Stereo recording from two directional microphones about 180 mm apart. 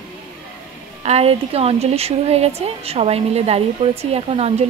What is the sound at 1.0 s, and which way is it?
A woman's voice, 35° right (ahead or behind).